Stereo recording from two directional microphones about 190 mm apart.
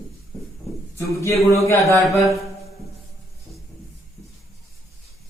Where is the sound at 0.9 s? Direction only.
15° left (ahead or behind).